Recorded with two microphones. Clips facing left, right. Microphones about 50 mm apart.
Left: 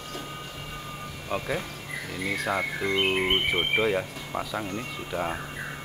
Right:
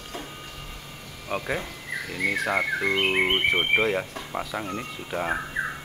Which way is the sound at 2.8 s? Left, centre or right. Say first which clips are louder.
Right 1 dB; right.